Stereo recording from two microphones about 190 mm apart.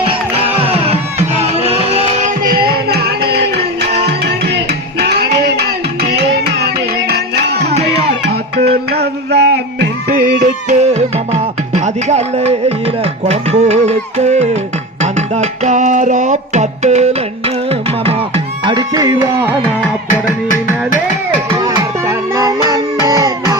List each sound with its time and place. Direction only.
0.1 s music: 30° right (ahead or behind)
2.4 s music: 50° right (ahead or behind)
7.7 s music: 35° right (ahead or behind)
8.9 s music: 60° right (ahead or behind)
10.1 s music: 45° right (ahead or behind)
15.0 s music: 40° right (ahead or behind)
18.6 s music: 20° right (ahead or behind)
21.6 s music: 15° right (ahead or behind)